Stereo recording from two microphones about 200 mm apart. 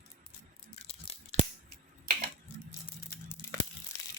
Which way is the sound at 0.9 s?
30° left (ahead or behind).